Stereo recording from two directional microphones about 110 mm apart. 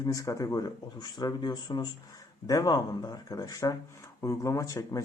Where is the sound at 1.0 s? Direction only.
45° left (ahead or behind).